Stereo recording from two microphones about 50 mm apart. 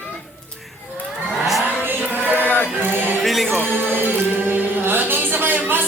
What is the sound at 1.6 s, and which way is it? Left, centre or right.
Vehicle, right.